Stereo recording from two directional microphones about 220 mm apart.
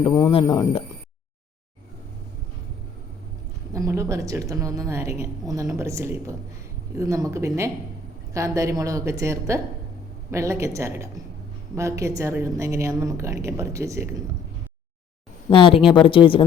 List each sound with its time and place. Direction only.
0.0 s speech: 20° left (ahead or behind)
3.8 s a woman's voice: 15° right (ahead or behind)
15.4 s speech: 25° left (ahead or behind)